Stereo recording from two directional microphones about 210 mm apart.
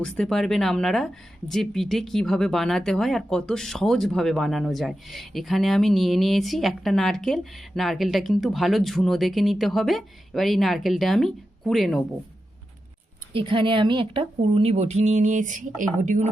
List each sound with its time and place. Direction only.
0.0 s speech: 5° left (ahead or behind)
13.3 s a woman's voice: 25° right (ahead or behind)